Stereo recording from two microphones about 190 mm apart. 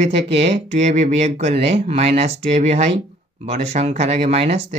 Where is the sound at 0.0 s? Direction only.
30° right (ahead or behind).